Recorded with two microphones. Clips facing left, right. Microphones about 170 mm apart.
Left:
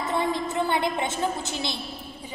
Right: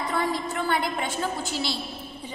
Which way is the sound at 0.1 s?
20° left (ahead or behind).